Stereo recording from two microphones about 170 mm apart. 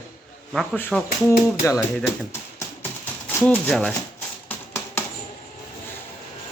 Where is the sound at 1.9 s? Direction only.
10° left (ahead or behind).